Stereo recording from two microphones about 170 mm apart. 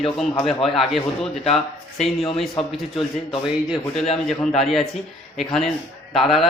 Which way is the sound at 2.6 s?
35° left (ahead or behind).